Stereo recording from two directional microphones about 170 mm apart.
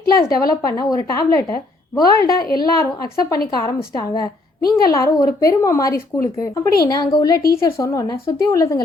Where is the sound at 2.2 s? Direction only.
60° left (ahead or behind).